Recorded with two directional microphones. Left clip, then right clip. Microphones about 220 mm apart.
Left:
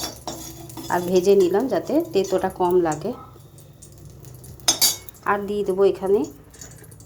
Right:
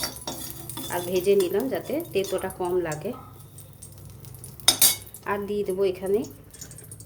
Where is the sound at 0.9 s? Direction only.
20° left (ahead or behind).